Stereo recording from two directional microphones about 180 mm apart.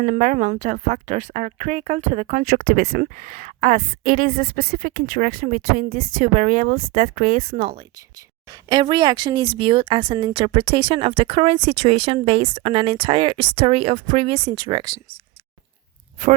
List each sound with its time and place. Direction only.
0.0 s a woman's voice: 45° right (ahead or behind)
2.5 s a woman's voice: 55° right (ahead or behind); by 7.8 s 40° right (ahead or behind)
8.7 s speech: 25° right (ahead or behind)